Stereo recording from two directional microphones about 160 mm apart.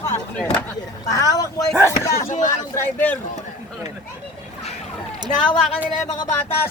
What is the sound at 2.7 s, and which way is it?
Speech, 10° left (ahead or behind).